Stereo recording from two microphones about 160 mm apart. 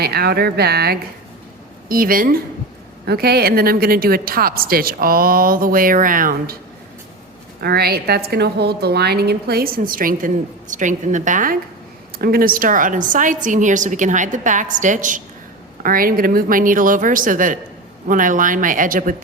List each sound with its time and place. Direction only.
0.0 s a woman's voice: 80° right
1.9 s a woman's voice: 65° right (ahead or behind)
3.1 s a woman's voice: 80° right; by 6.6 s 60° right (ahead or behind)
7.6 s a woman's voice: 80° right; by 11.5 s 55° right (ahead or behind)
12.2 s a woman's voice: 65° right (ahead or behind)